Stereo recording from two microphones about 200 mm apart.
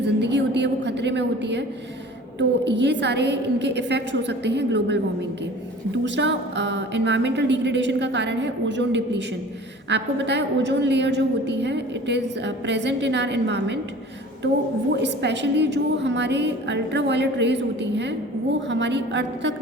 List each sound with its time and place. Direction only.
0.2 s a sound: 60° right (ahead or behind)
2.6 s a woman's voice: 60° right (ahead or behind)
14.9 s a woman's voice: 60° right (ahead or behind)